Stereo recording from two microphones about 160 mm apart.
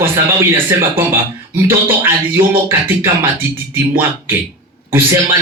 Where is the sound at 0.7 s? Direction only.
15° right (ahead or behind).